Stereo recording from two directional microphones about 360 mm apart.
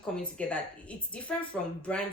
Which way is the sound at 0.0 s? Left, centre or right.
Centre.